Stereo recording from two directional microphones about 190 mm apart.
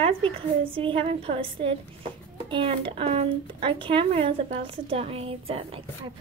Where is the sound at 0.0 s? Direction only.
30° right (ahead or behind).